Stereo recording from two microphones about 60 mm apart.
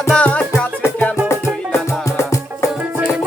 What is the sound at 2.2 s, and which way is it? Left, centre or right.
Music, left.